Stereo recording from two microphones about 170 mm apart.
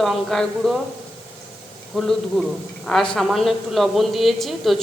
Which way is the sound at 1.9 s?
Centre (ahead or behind).